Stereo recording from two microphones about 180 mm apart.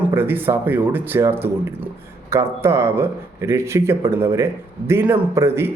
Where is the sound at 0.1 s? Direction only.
10° right (ahead or behind).